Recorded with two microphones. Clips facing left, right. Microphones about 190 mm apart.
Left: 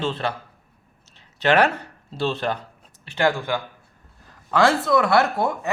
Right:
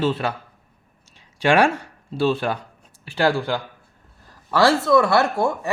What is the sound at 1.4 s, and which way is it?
Speech, 10° right (ahead or behind).